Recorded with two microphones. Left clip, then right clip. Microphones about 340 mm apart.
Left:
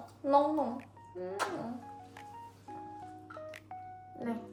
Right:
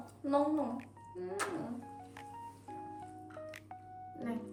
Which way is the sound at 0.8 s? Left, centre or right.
Centre.